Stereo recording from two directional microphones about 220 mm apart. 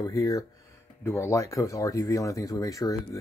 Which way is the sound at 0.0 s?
15° left (ahead or behind).